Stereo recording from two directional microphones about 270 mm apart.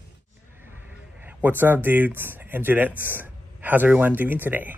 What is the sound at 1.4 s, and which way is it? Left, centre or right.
Speech, centre.